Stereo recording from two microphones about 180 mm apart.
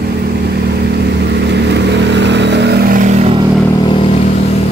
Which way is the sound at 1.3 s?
70° right (ahead or behind).